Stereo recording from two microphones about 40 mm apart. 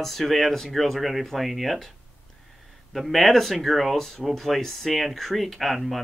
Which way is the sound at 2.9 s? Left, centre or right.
Centre.